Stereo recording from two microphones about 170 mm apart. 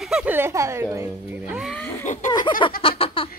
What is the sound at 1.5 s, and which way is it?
Speech, centre (ahead or behind).